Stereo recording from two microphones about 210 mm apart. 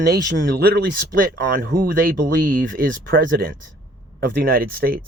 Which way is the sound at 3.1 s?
55° right (ahead or behind).